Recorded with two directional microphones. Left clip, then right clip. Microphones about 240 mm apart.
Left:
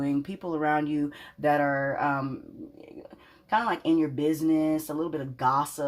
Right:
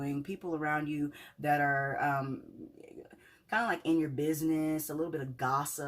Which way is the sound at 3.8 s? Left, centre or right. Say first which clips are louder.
Left 6 dB; left.